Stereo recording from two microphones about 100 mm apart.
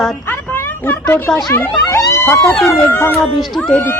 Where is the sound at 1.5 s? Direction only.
30° left (ahead or behind).